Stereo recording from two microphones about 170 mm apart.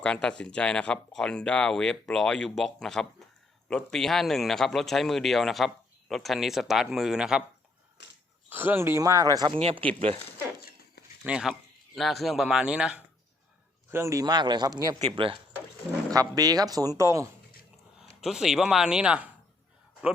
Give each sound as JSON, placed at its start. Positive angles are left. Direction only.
{"t": 0.0, "sound": "speech", "side_deg": 5}
{"t": 8.4, "sound": "speech", "side_deg": -10}
{"t": 11.2, "sound": "speech", "side_deg": -5}
{"t": 13.9, "sound": "a man's voice", "side_deg": -15}
{"t": 18.2, "sound": "speech", "side_deg": 0}